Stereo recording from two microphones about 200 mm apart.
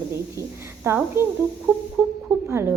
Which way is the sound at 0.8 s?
10° right (ahead or behind).